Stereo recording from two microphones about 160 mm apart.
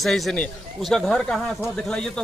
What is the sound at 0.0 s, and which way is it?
A man's voice, centre (ahead or behind).